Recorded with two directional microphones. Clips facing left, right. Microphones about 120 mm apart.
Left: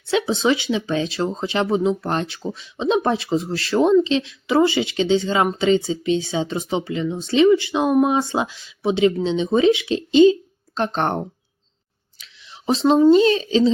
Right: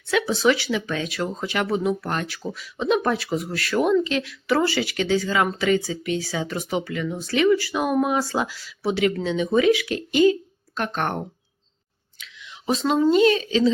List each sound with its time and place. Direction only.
0.1 s speech: 25° left (ahead or behind)
12.2 s speech: 30° left (ahead or behind)